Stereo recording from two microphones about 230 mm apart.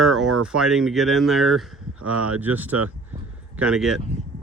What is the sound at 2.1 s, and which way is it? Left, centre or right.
Speech, right.